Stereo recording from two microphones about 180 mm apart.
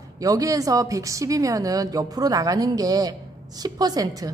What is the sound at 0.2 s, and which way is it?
A woman's voice, 20° right (ahead or behind).